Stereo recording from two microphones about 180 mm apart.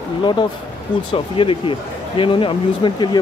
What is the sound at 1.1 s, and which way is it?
Speech, 30° left (ahead or behind).